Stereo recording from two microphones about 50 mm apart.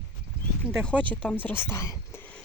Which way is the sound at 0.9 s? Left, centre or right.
Left.